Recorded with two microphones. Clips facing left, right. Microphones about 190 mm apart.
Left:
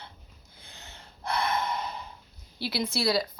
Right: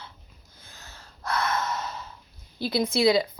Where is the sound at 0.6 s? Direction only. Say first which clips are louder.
Even; 20° left (ahead or behind).